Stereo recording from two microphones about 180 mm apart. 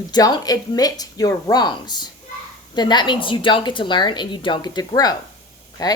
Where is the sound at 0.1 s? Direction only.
25° left (ahead or behind).